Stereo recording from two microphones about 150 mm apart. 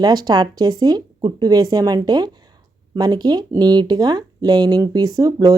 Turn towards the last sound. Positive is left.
turn(degrees=-25)  # may be behind; listen again after turning